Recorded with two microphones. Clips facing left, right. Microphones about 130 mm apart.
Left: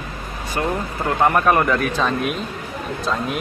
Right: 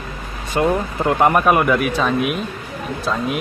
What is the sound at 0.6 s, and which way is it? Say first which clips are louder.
A man's voice: right 5 dB; 20° right (ahead or behind).